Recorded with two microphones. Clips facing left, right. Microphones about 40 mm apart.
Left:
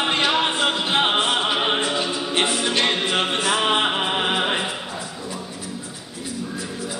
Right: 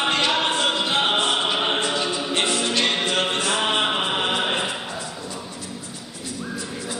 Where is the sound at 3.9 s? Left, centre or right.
Centre.